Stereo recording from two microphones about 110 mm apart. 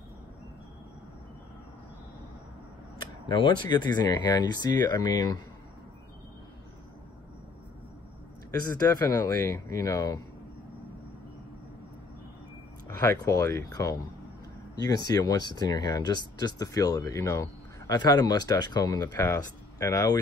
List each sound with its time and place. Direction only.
3.3 s speech: 40° left (ahead or behind)
8.5 s speech: 35° left (ahead or behind)
12.8 s speech: 30° left (ahead or behind)